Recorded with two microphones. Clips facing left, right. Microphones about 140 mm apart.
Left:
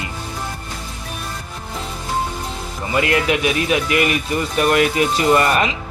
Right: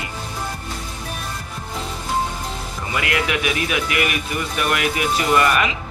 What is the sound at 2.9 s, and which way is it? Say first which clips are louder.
A man's voice: left 5 dB; 30° left (ahead or behind).